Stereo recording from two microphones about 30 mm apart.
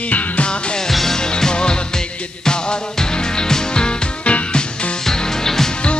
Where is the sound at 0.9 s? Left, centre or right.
Centre.